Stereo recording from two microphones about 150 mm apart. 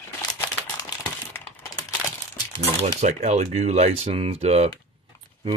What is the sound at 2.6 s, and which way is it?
Speech, 50° right (ahead or behind).